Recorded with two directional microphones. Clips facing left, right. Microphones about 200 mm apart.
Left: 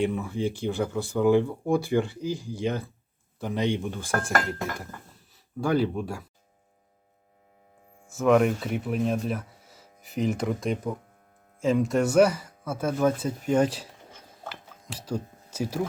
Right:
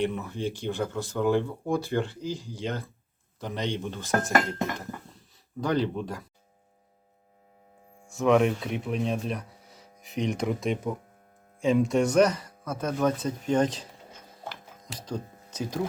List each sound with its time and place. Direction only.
0.0 s speech: 10° left (ahead or behind)
4.1 s speech: 20° right (ahead or behind)
5.5 s speech: 10° left (ahead or behind)
8.0 s speech: centre (ahead or behind)
14.5 s a sound: 5° left (ahead or behind)